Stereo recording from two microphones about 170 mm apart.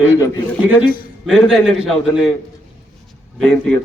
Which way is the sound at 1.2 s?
Centre (ahead or behind).